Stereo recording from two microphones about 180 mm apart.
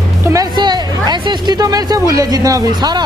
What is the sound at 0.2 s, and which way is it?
A woman's voice, 20° right (ahead or behind).